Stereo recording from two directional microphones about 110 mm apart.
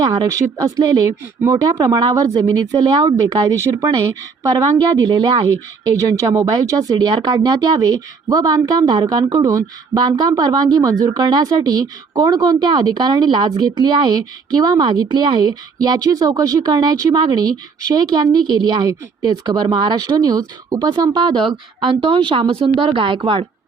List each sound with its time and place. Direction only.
0.0 s speech: 35° right (ahead or behind)
0.8 s speech: 40° right (ahead or behind)
1.4 s speech: 30° right (ahead or behind); by 5.5 s 50° right (ahead or behind)
6.5 s speech: 35° right (ahead or behind); by 23.5 s 55° right (ahead or behind)